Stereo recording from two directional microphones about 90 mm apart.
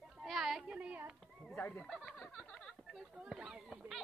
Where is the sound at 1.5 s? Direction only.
20° left (ahead or behind).